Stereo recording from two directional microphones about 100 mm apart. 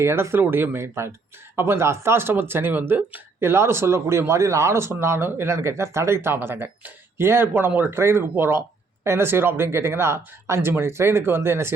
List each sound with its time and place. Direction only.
0.0 s speech: 25° right (ahead or behind)